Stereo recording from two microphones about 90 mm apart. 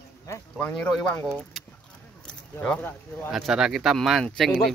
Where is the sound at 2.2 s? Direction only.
10° left (ahead or behind).